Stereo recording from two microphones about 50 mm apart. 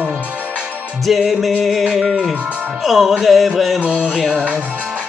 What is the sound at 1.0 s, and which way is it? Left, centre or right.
Music, centre.